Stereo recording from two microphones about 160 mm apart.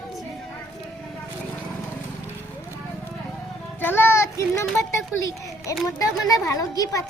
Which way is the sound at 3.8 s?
15° left (ahead or behind).